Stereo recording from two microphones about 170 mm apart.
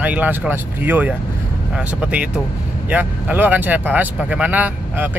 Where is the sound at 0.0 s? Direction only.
10° right (ahead or behind).